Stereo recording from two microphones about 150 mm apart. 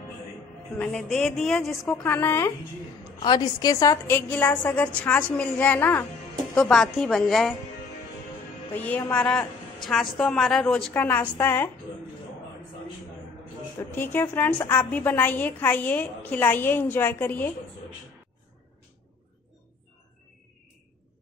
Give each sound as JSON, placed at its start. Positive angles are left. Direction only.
{"t": 0.7, "sound": "a woman's voice", "side_deg": 5}
{"t": 2.0, "sound": "a woman's voice", "side_deg": 15}
{"t": 3.2, "sound": "a woman's voice", "side_deg": 30}
{"t": 4.1, "sound": "a woman's voice", "side_deg": 15}
{"t": 8.7, "sound": "a woman's voice", "side_deg": 10}
{"t": 13.7, "sound": "a woman's voice", "side_deg": 15}